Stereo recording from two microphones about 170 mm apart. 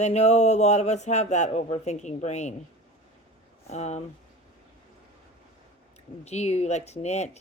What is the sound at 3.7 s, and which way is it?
Speech, 40° left (ahead or behind).